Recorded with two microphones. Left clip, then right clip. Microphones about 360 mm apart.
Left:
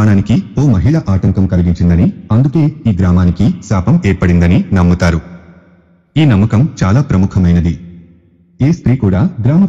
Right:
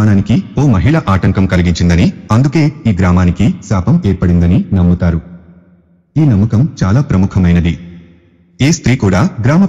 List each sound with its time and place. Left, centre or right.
0.0 s speech: centre
1.3 s a man's voice: right
2.9 s a man's voice: centre
3.5 s speech: centre
4.5 s a man's voice: left
6.2 s speech: left
6.5 s speech: centre
8.5 s a man's voice: right
9.4 s a man's voice: right